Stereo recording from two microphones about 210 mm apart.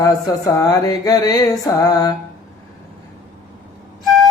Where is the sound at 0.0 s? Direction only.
15° left (ahead or behind).